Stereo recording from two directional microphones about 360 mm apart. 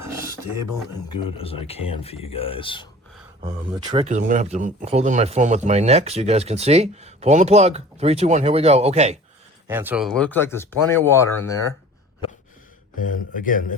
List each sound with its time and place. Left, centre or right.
0.0 s a sound: centre
1.4 s speech: centre
3.9 s speech: centre
9.6 s speech: centre
13.4 s a man's voice: left